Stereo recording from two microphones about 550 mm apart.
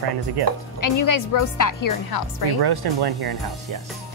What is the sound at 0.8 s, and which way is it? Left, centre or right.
A woman's voice, left.